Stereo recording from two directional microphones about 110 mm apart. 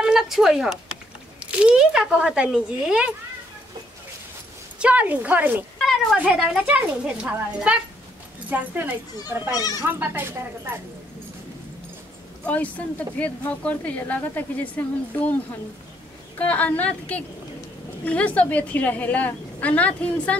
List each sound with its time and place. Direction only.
0.0 s speech: 5° right (ahead or behind)
4.7 s speech: 10° right (ahead or behind)
9.6 s speech: 35° left (ahead or behind)
9.8 s speech: 20° right (ahead or behind)
12.4 s a woman's voice: 15° left (ahead or behind)